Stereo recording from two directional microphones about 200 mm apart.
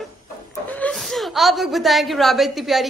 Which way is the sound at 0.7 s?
5° left (ahead or behind).